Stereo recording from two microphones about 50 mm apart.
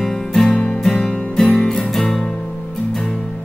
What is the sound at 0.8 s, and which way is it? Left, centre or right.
Music, centre.